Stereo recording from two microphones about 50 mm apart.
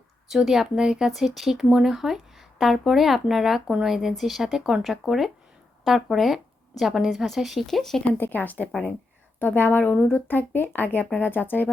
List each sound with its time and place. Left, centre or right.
0.3 s a woman's voice: centre
7.7 s speech: centre
8.2 s speech: left